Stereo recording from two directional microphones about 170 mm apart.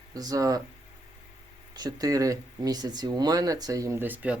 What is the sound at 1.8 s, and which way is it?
Speech, 20° right (ahead or behind).